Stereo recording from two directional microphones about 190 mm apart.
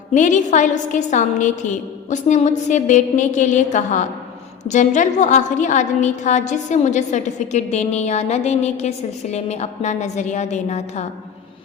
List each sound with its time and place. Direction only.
0.1 s a woman's voice: 40° left (ahead or behind)